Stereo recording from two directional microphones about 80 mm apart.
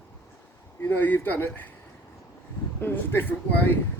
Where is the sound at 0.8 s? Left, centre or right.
Left.